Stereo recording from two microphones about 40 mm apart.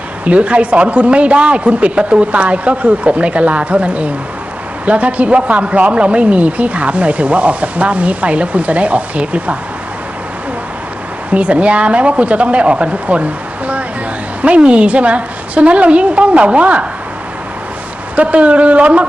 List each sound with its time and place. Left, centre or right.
0.3 s speech: right
11.3 s speech: right
14.4 s speech: right
18.2 s speech: right